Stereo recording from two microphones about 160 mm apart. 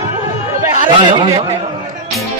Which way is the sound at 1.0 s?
30° right (ahead or behind).